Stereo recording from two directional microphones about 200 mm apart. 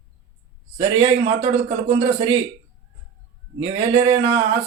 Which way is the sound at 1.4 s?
30° right (ahead or behind).